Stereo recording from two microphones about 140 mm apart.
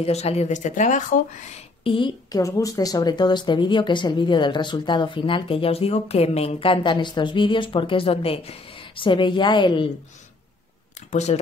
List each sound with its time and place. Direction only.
0.0 s speech: 50° left (ahead or behind); by 1.6 s 65° left (ahead or behind)
1.9 s speech: 35° left (ahead or behind)
11.1 s speech: 55° left (ahead or behind)